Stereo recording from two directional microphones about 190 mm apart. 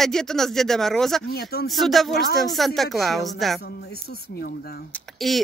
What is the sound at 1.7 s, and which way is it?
Speech, centre (ahead or behind).